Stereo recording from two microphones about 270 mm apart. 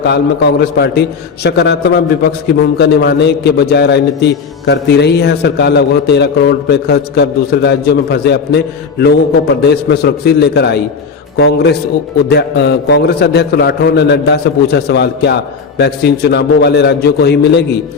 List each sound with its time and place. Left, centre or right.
0.0 s a man's voice: left